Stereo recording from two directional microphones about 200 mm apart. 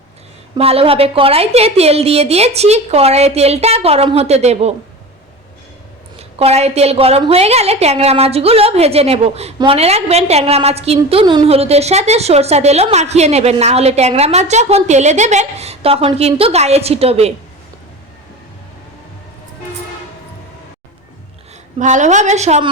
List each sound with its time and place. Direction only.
0.5 s a woman's voice: 30° right (ahead or behind)
6.3 s a woman's voice: 30° right (ahead or behind)
21.8 s a woman's voice: 35° right (ahead or behind)